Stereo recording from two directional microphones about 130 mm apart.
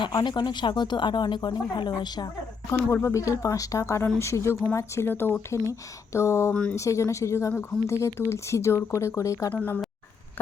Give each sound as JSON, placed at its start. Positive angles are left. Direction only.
{"t": 0.1, "sound": "speech", "side_deg": 35}
{"t": 2.6, "sound": "speech", "side_deg": 20}
{"t": 6.5, "sound": "speech", "side_deg": 10}
{"t": 6.7, "sound": "speech", "side_deg": 25}
{"t": 9.5, "sound": "speech", "side_deg": 10}